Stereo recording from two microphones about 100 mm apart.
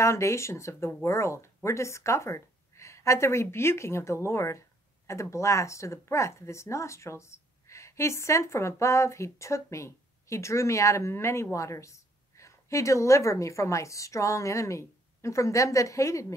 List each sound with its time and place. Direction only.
0.0 s a woman's voice: 30° left (ahead or behind)